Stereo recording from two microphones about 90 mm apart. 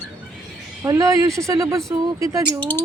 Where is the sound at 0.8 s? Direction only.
35° right (ahead or behind).